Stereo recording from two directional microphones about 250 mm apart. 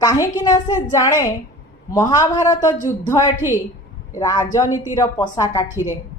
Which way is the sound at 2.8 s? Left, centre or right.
Left.